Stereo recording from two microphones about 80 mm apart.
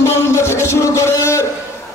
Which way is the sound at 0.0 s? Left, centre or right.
Left.